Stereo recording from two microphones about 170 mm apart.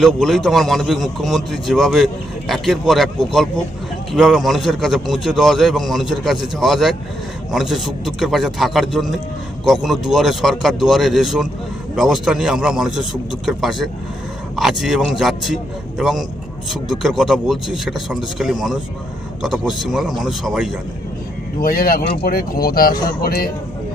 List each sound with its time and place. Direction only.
0.0 s a man's voice: centre (ahead or behind)
21.6 s speech: 60° left (ahead or behind)